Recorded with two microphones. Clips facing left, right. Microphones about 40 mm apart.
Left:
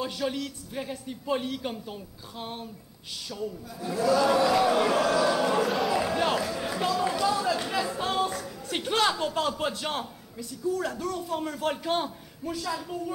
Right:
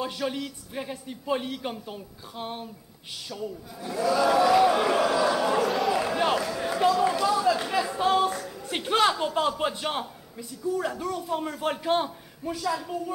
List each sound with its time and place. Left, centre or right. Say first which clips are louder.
0.0 s a man's voice: even; centre
3.8 s a man's voice: even; centre
5.2 s a sound: right 1 dB; centre
8.6 s a man's voice: right 3 dB; centre